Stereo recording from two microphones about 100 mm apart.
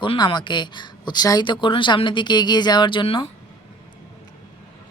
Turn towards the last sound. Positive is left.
turn(degrees=65)  # may be behind; listen again after turning